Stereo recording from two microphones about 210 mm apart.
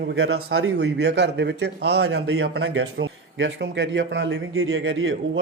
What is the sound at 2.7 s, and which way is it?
Speech, 70° right (ahead or behind).